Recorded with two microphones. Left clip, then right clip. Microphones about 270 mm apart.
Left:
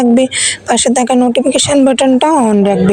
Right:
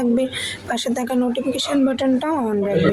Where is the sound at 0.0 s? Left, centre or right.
Left.